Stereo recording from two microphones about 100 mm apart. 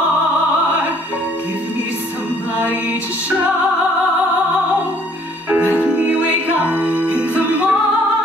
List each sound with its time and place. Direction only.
2.5 s music: 15° right (ahead or behind)
5.8 s music: 15° right (ahead or behind)